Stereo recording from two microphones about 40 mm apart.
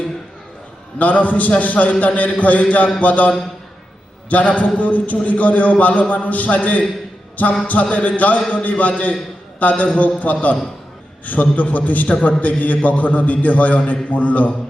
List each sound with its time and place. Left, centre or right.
0.9 s a man's voice: left